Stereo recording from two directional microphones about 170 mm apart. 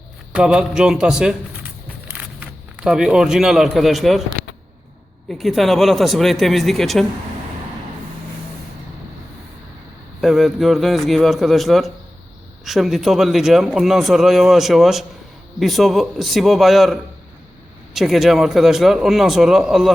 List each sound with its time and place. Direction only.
0.3 s speech: 5° right (ahead or behind)
2.4 s a man's voice: 5° right (ahead or behind)
5.3 s speech: centre (ahead or behind)
10.2 s speech: centre (ahead or behind)